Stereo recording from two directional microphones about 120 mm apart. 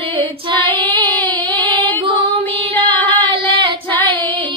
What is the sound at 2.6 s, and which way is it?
Female singing, 45° right (ahead or behind).